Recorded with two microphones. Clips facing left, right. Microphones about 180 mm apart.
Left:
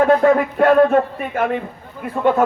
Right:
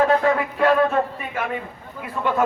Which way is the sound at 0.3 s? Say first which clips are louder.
Left 5 dB; 50° left (ahead or behind).